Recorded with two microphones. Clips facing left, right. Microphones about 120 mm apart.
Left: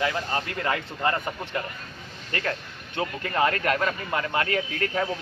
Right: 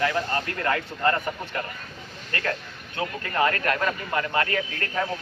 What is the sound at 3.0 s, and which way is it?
A man's voice, 20° left (ahead or behind).